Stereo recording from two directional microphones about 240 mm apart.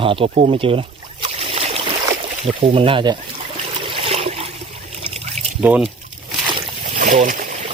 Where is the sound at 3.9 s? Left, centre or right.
Right.